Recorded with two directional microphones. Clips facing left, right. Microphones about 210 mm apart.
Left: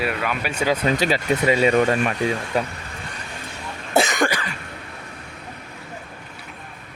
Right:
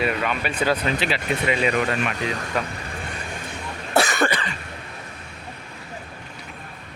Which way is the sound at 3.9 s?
20° left (ahead or behind).